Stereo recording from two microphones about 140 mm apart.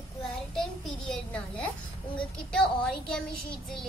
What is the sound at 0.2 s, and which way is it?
Child singing, centre (ahead or behind).